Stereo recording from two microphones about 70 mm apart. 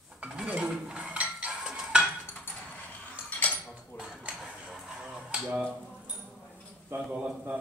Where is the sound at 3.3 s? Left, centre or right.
Left.